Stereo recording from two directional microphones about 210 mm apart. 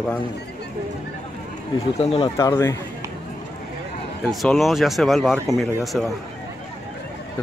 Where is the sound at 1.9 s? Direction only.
30° left (ahead or behind).